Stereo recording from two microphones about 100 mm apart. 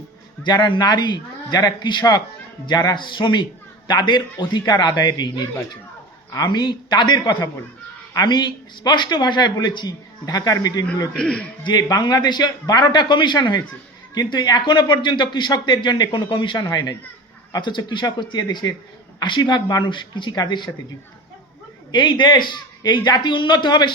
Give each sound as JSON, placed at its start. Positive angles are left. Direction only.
{"t": 0.4, "sound": "a man's voice", "side_deg": 50}
{"t": 6.5, "sound": "a man's voice", "side_deg": 45}
{"t": 11.2, "sound": "a man's voice", "side_deg": 10}
{"t": 11.6, "sound": "a man's voice", "side_deg": 45}
{"t": 21.9, "sound": "a man's voice", "side_deg": 50}